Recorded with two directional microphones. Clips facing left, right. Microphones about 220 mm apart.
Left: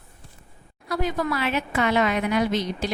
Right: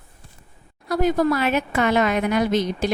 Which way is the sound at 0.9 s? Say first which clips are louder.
Right 6 dB; 40° right (ahead or behind).